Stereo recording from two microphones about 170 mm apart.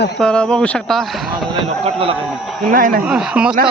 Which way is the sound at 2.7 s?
55° right (ahead or behind).